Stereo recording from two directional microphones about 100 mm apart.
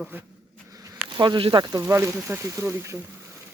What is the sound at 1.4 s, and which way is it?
Speech, 60° right (ahead or behind).